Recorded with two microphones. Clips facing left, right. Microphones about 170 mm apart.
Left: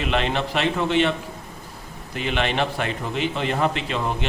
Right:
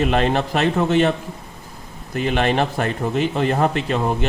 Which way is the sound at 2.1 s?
45° right (ahead or behind).